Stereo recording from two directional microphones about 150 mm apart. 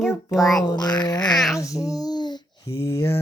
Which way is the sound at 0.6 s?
30° left (ahead or behind).